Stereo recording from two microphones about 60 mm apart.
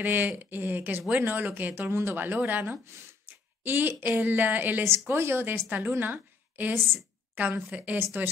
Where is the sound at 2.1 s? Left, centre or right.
Right.